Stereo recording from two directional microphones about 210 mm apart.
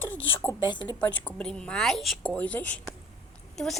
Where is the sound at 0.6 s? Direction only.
20° left (ahead or behind).